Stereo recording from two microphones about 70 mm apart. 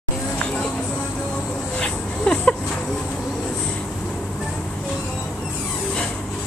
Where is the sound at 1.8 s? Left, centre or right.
Centre.